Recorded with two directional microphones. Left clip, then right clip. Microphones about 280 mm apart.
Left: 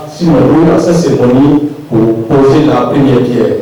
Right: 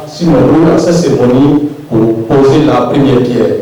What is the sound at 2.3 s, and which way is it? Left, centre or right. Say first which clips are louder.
Speech: even; left.